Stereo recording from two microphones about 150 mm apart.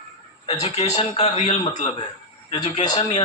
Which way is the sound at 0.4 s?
45° left (ahead or behind).